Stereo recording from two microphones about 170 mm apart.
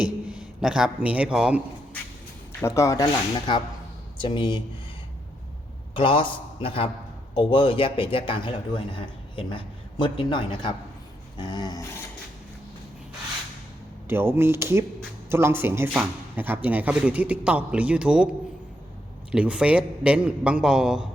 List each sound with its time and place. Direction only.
0.0 s a man's voice: 5° right (ahead or behind)
2.5 s a man's voice: 15° left (ahead or behind)
5.9 s a man's voice: 30° left (ahead or behind)
14.1 s speech: 15° right (ahead or behind)
19.3 s speech: 5° right (ahead or behind)